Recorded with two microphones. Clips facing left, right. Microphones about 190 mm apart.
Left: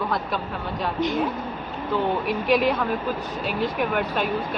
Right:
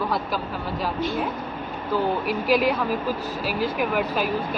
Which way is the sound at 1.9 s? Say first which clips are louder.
Even; centre (ahead or behind).